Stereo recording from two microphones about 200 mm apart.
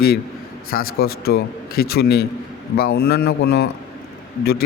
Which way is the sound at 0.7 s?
50° left (ahead or behind).